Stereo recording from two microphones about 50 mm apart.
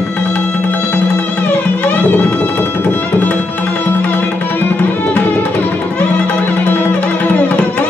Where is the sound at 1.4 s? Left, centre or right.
Left.